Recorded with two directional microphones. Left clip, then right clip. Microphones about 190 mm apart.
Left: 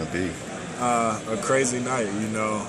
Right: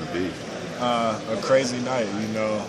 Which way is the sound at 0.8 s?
Centre (ahead or behind).